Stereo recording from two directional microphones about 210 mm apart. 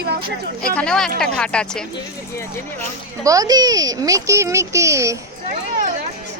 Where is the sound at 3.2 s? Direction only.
15° right (ahead or behind).